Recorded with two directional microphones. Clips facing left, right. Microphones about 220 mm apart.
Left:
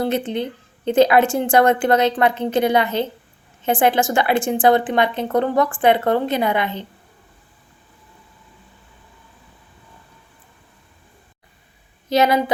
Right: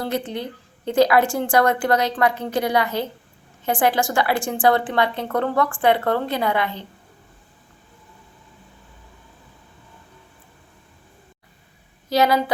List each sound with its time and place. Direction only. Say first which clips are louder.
0.0 s a woman's voice: left 4 dB; 20° left (ahead or behind)
12.0 s a woman's voice: left 2 dB; 20° left (ahead or behind)